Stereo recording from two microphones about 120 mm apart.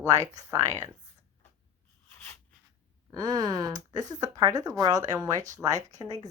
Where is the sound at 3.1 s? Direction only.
35° right (ahead or behind).